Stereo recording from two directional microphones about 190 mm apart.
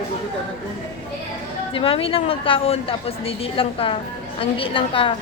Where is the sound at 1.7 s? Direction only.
30° left (ahead or behind).